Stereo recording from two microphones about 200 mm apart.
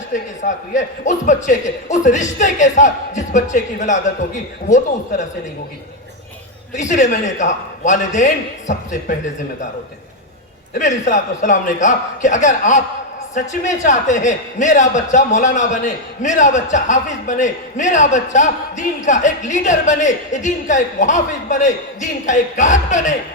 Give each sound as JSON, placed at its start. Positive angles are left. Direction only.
{"t": 0.1, "sound": "a man's voice", "side_deg": 40}
{"t": 6.7, "sound": "a man's voice", "side_deg": 35}
{"t": 10.8, "sound": "a man's voice", "side_deg": 40}